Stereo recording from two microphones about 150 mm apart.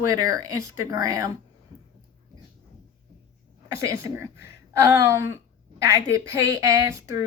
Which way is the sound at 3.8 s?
20° right (ahead or behind).